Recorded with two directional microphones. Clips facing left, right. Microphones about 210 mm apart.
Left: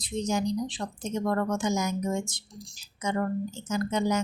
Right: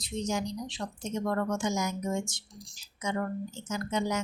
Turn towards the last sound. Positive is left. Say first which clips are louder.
# left 4 dB
turn(degrees=40)  # may be behind; listen again after turning